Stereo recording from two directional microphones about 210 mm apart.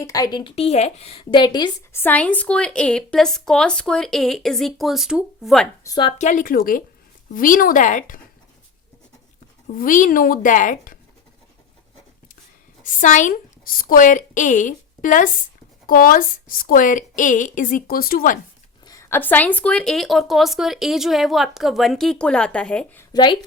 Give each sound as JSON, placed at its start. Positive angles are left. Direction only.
{"t": 0.0, "sound": "a woman's voice", "side_deg": 15}
{"t": 5.8, "sound": "speech", "side_deg": 20}
{"t": 6.1, "sound": "a woman's voice", "side_deg": 35}
{"t": 9.6, "sound": "a woman's voice", "side_deg": 40}
{"t": 12.8, "sound": "a woman's voice", "side_deg": 35}
{"t": 18.9, "sound": "a woman's voice", "side_deg": 15}
{"t": 23.1, "sound": "speech", "side_deg": 20}